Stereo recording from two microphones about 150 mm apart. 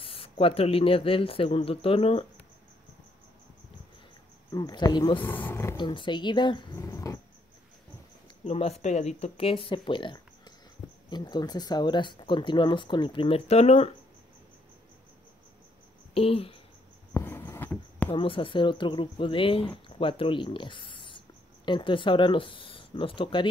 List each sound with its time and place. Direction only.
0.0 s speech: 40° left (ahead or behind)
4.5 s speech: 25° left (ahead or behind)
5.2 s speech: 15° left (ahead or behind)
5.8 s speech: 30° left (ahead or behind)
8.5 s speech: 45° left (ahead or behind)
16.2 s speech: 40° left (ahead or behind)
17.1 s a sound: 15° left (ahead or behind)
18.1 s speech: 35° left (ahead or behind)